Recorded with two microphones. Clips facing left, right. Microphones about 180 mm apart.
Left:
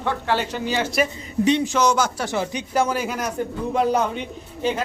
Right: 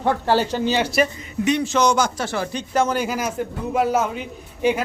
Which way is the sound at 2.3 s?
15° left (ahead or behind).